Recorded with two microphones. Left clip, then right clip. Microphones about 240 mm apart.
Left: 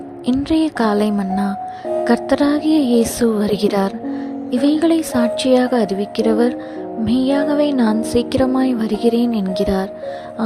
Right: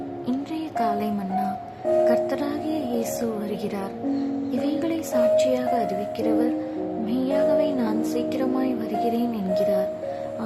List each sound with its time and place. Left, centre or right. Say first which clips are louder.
0.3 s music: left 14 dB; left